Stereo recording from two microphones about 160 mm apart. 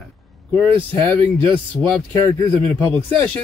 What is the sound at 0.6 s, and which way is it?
Speech, 30° right (ahead or behind).